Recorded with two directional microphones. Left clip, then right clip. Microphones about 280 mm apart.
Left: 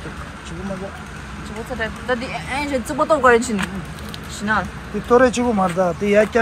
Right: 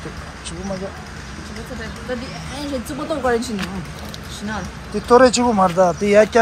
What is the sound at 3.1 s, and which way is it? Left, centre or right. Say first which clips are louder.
Speech: left 6 dB; left.